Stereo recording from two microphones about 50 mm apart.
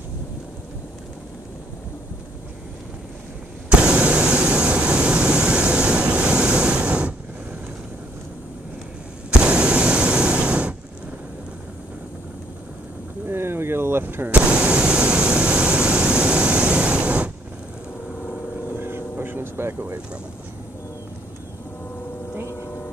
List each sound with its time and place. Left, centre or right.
3.6 s vehicle: right
9.4 s vehicle: right
13.3 s artillery fire: right
14.3 s vehicle: right
18.8 s vehicle: right